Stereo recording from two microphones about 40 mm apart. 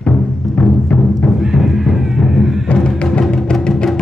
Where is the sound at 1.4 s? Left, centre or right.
Centre.